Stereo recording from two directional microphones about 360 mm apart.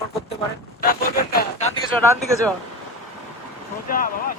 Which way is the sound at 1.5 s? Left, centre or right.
Centre.